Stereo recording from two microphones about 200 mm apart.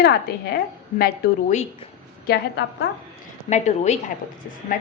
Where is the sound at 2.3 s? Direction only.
60° left (ahead or behind).